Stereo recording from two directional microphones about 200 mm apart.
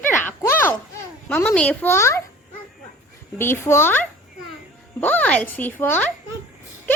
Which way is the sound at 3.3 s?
10° left (ahead or behind).